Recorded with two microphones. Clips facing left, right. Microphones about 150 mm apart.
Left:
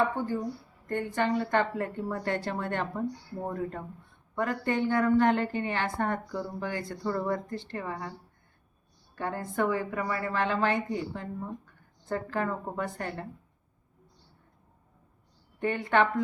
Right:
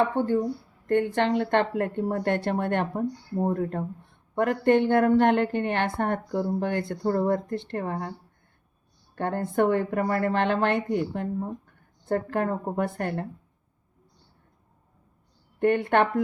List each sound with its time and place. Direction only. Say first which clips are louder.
0.2 s a woman's voice: right 7 dB; 30° right (ahead or behind)
0.9 s speech: right 6 dB; 65° right (ahead or behind); by 8.1 s 50° right (ahead or behind)
9.1 s speech: right 6 dB; 60° right (ahead or behind)
15.5 s speech: right 4 dB; 60° right (ahead or behind)